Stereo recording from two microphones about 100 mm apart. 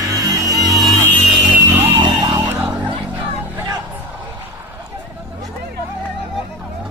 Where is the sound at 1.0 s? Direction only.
15° left (ahead or behind).